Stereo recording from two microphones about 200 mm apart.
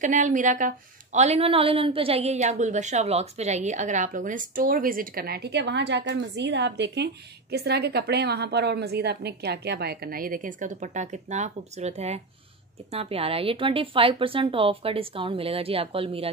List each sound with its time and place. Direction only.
0.0 s a woman's voice: 40° right (ahead or behind)